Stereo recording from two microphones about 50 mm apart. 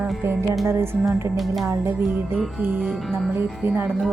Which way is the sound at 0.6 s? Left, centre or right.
Right.